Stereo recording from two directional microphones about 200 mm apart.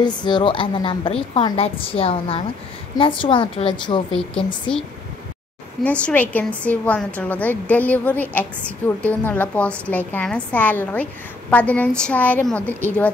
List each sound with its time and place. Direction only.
0.0 s a woman's voice: 20° left (ahead or behind)
4.2 s speech: 5° left (ahead or behind)
5.9 s a woman's voice: 10° left (ahead or behind)